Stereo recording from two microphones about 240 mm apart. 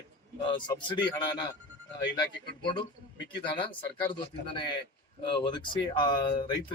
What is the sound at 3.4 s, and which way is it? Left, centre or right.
Speech, centre.